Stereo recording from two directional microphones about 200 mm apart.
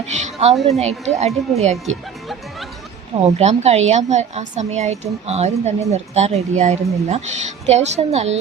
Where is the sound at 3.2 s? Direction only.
35° right (ahead or behind).